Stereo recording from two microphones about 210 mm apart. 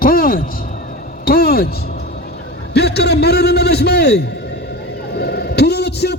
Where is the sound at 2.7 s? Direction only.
50° left (ahead or behind).